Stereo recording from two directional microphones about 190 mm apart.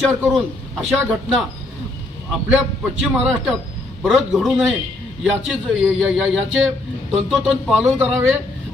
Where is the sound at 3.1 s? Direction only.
5° right (ahead or behind).